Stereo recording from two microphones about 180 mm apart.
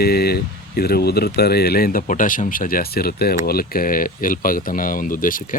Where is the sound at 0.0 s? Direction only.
60° left (ahead or behind).